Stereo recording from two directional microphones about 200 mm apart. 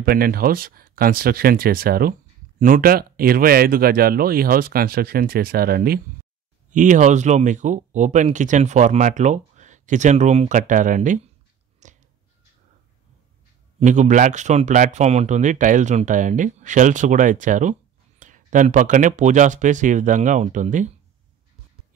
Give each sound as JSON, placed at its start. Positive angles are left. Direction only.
{"t": 0.0, "sound": "speech", "side_deg": -50}
{"t": 11.8, "sound": "a sound", "side_deg": -35}
{"t": 13.7, "sound": "speech", "side_deg": -35}